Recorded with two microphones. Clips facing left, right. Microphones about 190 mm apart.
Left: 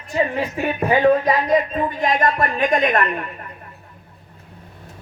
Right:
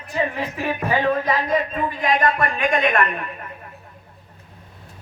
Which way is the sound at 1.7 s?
45° left (ahead or behind).